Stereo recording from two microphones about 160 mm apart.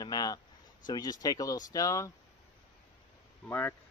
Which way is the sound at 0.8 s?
25° left (ahead or behind).